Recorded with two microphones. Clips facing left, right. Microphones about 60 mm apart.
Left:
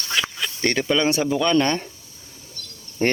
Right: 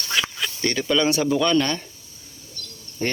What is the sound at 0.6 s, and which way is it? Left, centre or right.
Mantra, left.